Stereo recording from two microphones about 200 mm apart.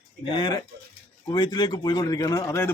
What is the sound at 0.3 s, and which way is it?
Speech, 20° left (ahead or behind).